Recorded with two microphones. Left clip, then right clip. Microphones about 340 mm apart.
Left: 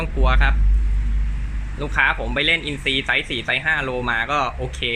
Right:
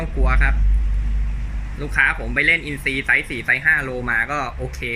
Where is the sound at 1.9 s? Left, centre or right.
Centre.